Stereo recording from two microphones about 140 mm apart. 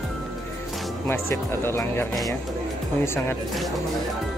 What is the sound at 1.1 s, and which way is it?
Speech, 20° left (ahead or behind).